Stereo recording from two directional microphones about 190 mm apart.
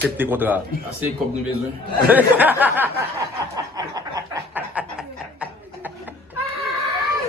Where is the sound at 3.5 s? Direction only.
20° right (ahead or behind).